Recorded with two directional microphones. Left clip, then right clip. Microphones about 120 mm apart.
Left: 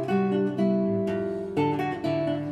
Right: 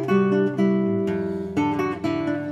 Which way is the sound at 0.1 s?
30° right (ahead or behind).